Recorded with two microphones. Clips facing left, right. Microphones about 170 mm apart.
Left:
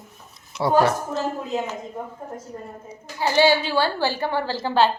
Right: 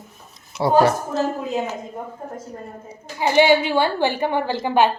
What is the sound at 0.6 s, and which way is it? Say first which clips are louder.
Speech: right 2 dB; 25° right (ahead or behind).